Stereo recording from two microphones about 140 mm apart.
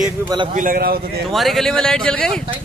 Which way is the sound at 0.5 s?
80° right.